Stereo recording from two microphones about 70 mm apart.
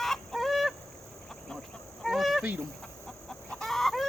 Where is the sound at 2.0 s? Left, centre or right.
Centre.